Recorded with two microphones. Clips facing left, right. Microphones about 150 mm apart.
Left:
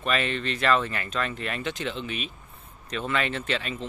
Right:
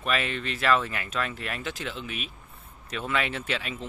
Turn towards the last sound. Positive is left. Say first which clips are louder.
# left 2 dB
turn(degrees=-5)  # may be behind; listen again after turning